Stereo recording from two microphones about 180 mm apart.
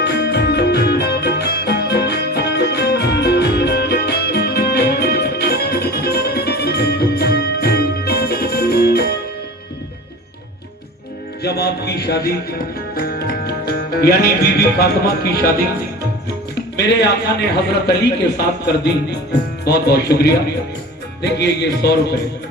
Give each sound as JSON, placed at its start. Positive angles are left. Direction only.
{"t": 0.0, "sound": "music", "side_deg": 70}
{"t": 11.4, "sound": "a man's voice", "side_deg": 65}
{"t": 13.0, "sound": "music", "side_deg": 60}
{"t": 16.7, "sound": "a man's voice", "side_deg": 70}